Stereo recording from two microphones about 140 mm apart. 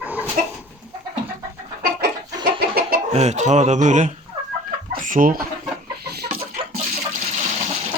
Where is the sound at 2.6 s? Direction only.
90° right.